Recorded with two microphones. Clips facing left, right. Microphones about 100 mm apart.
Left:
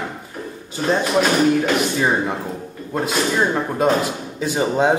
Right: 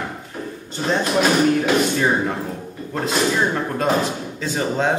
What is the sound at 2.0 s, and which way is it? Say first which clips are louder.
Speech: even; 10° left (ahead or behind).